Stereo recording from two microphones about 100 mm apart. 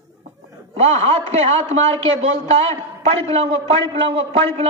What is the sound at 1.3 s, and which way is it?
A man's voice, 90° right.